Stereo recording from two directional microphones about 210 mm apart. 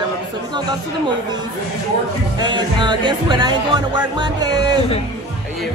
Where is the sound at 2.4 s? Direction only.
20° right (ahead or behind).